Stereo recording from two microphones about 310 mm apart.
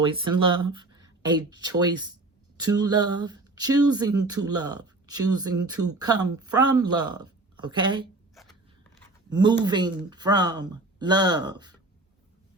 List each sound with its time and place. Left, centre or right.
0.0 s speech: centre
5.8 s speech: right
6.3 s speech: centre
8.4 s zipper: centre
9.3 s speech: centre